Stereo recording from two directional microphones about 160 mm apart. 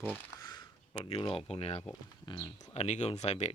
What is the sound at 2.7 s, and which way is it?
Speech, 45° left (ahead or behind).